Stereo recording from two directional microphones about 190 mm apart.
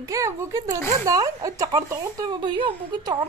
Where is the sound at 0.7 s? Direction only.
10° left (ahead or behind).